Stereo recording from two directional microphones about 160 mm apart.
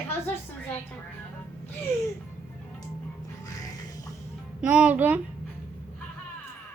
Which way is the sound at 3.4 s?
20° left (ahead or behind).